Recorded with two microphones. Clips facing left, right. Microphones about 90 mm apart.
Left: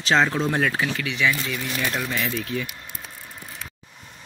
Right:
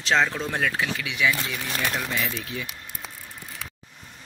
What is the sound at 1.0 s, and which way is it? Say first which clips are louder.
Speech: even; 10° right (ahead or behind).